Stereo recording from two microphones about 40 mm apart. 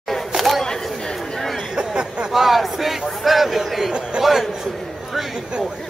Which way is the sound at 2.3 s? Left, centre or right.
Centre.